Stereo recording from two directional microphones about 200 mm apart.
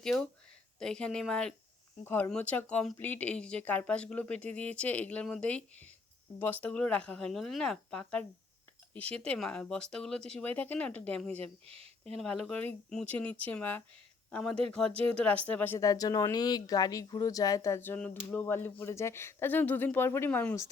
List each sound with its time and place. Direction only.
0.0 s speech: 5° left (ahead or behind)
11.6 s speech: 30° right (ahead or behind)
12.1 s speech: 5° left (ahead or behind)